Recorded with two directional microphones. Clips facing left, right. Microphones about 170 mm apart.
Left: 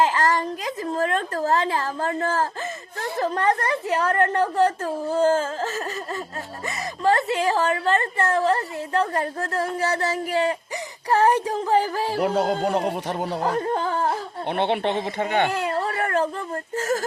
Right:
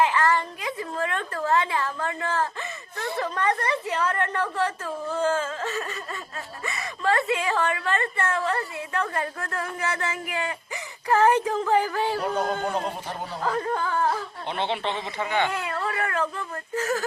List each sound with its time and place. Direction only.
0.0 s a woman's voice: 40° left (ahead or behind)
12.2 s speech: 80° left
13.6 s speech: 30° left (ahead or behind)
14.5 s a woman's voice: 55° left (ahead or behind)
15.5 s a sound: 35° left (ahead or behind)